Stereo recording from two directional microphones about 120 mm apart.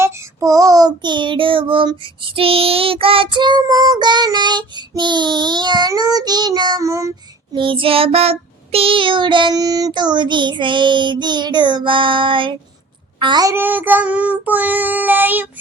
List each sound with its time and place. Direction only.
0.0 s child singing: 25° right (ahead or behind)
7.5 s child singing: 45° right (ahead or behind)
13.1 s a child's voice: 45° right (ahead or behind)
13.4 s child singing: 20° right (ahead or behind)